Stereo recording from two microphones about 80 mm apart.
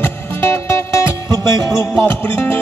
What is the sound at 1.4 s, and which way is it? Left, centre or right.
Music, right.